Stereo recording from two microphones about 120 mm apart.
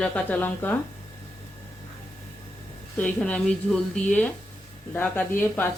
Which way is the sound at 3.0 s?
10° left (ahead or behind).